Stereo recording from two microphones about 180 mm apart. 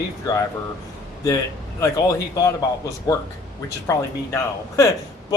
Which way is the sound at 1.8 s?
20° left (ahead or behind).